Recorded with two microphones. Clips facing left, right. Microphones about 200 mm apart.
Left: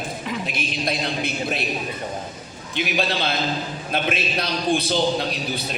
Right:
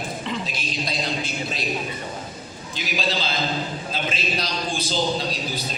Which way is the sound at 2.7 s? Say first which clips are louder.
Left 3 dB; 60° left (ahead or behind).